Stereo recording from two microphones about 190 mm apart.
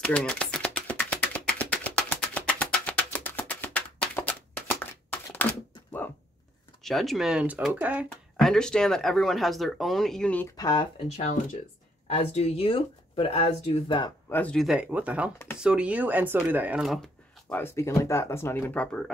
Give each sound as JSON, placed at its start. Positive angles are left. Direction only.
{"t": 0.0, "sound": "a sound", "side_deg": 5}
{"t": 6.8, "sound": "speech", "side_deg": 0}
{"t": 10.5, "sound": "speech", "side_deg": 20}
{"t": 11.1, "sound": "speech", "side_deg": 35}
{"t": 14.3, "sound": "speech", "side_deg": 5}